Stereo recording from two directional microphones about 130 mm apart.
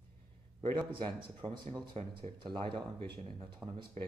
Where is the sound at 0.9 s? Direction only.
40° right (ahead or behind).